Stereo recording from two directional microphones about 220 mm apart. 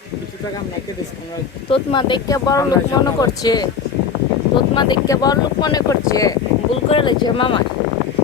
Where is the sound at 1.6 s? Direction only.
25° left (ahead or behind).